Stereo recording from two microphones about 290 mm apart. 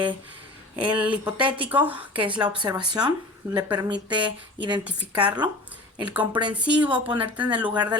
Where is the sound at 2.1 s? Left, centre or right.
Centre.